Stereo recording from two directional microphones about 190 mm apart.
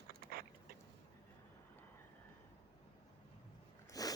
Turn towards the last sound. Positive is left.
turn(degrees=20)  # may be behind; listen again after turning